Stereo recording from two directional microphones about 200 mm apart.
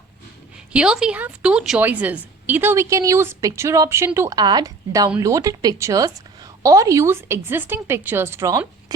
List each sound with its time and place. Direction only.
0.7 s a woman's voice: 5° right (ahead or behind)